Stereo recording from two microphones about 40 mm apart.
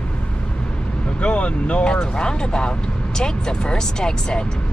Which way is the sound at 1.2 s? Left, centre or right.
Left.